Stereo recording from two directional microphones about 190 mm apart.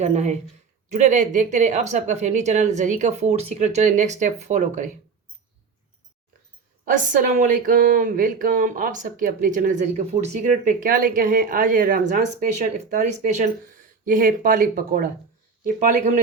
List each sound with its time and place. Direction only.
0.0 s a woman's voice: 35° right (ahead or behind)
6.8 s speech: 40° right (ahead or behind)